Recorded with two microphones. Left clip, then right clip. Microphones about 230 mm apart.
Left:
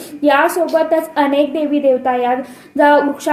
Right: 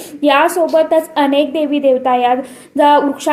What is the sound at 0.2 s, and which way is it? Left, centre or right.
A woman's voice, right.